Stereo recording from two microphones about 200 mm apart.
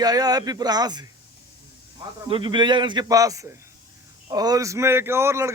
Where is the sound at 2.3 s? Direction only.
25° right (ahead or behind).